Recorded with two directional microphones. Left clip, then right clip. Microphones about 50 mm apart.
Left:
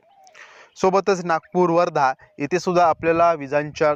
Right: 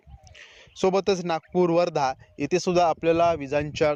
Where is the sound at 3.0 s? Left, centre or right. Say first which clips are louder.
Left 4 dB; right.